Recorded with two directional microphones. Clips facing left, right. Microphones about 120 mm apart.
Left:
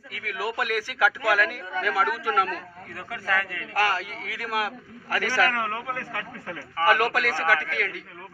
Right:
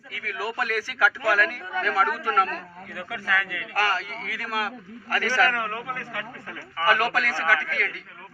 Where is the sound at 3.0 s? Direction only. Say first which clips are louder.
Even; 40° left (ahead or behind).